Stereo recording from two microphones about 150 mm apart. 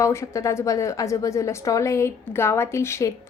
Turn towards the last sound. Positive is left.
turn(degrees=20)  # may be behind; listen again after turning